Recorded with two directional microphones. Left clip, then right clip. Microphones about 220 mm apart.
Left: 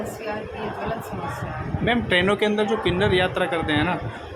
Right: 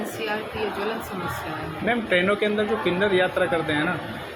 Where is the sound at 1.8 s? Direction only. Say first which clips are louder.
Left 1 dB; 15° left (ahead or behind).